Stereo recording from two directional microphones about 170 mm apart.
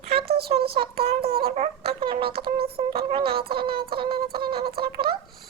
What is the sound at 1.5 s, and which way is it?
Music, 40° right (ahead or behind).